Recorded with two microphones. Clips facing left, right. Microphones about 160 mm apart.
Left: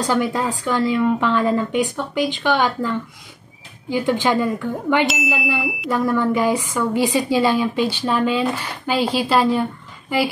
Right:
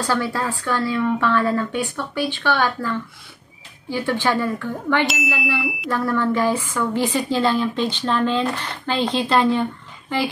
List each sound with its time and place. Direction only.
0.0 s a woman's voice: 15° left (ahead or behind)
5.0 s ding: centre (ahead or behind)
5.6 s a sound: centre (ahead or behind)
5.9 s a woman's voice: 15° left (ahead or behind)